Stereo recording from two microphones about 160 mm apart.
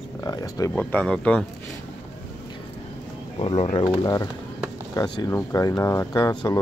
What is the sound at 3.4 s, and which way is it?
Speech, 30° left (ahead or behind).